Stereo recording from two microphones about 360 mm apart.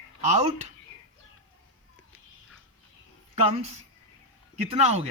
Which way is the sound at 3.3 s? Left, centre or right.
Centre.